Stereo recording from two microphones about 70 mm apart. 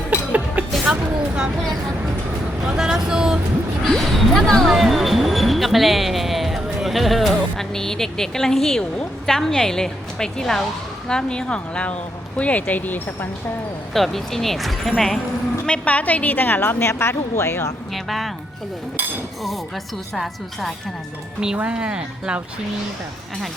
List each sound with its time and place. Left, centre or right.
0.1 s music: right
2.6 s speech: centre
3.8 s a woman's voice: centre; by 13.0 s left
13.9 s speech: centre
15.6 s a woman's voice: centre; by 17.7 s left
17.9 s speech: centre
20.1 s speech: centre
21.4 s speech: centre